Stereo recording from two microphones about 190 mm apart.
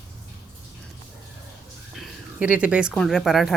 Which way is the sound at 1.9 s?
5° right (ahead or behind).